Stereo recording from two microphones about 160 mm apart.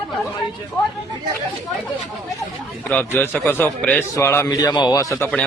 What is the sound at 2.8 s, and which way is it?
A man's voice, 10° left (ahead or behind).